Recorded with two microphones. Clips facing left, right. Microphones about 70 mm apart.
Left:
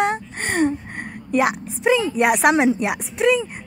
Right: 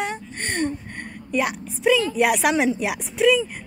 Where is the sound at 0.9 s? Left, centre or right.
Left.